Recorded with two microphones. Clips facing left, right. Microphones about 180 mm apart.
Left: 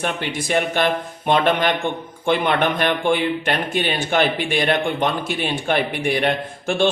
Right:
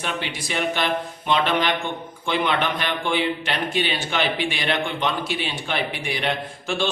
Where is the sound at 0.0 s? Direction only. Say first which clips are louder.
Left 4 dB; 50° left (ahead or behind).